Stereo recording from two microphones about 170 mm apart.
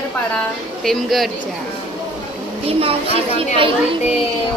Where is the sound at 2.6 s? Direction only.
35° right (ahead or behind).